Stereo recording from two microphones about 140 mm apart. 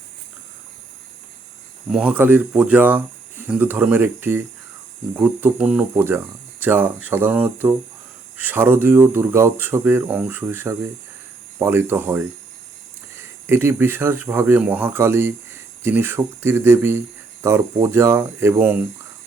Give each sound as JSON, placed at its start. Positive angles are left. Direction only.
{"t": 1.9, "sound": "speech", "side_deg": -10}